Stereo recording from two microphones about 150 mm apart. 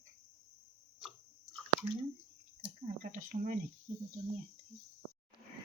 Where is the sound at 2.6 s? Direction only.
60° right (ahead or behind).